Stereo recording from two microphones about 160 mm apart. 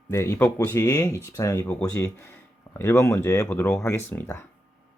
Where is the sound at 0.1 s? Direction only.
15° left (ahead or behind).